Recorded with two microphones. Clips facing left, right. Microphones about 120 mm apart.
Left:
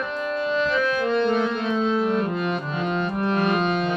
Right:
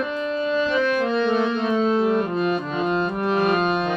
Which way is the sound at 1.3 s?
40° right (ahead or behind).